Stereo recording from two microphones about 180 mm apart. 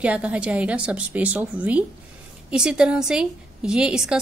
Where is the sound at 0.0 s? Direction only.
5° right (ahead or behind).